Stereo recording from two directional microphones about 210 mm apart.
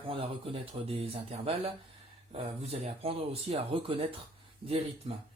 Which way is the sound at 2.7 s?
30° right (ahead or behind).